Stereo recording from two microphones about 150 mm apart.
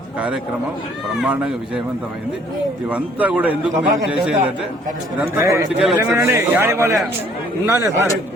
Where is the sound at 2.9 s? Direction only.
10° right (ahead or behind).